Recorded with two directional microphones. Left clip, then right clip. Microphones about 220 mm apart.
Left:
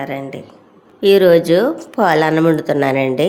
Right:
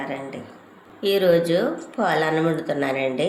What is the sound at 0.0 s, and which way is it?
A woman's voice, 50° left (ahead or behind).